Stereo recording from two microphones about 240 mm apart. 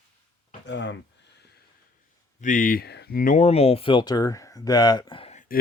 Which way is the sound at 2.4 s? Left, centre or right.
Left.